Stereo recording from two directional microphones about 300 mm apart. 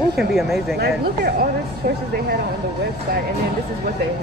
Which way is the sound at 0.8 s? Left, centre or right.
Right.